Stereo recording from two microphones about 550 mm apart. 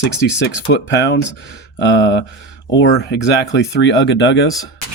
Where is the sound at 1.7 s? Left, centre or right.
Centre.